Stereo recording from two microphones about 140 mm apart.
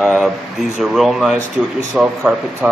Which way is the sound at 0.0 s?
Centre (ahead or behind).